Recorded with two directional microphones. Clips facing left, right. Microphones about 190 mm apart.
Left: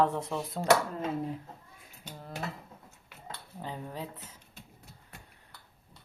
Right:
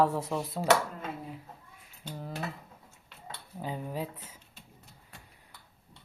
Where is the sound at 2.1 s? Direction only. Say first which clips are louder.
Right 5 dB; centre (ahead or behind).